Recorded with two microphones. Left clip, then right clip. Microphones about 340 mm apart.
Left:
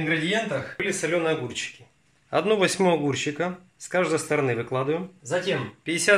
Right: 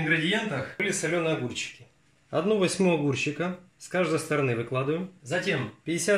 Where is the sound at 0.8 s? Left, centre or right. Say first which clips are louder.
Left 3 dB; left.